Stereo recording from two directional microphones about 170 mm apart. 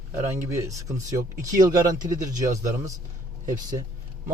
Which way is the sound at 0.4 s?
15° right (ahead or behind).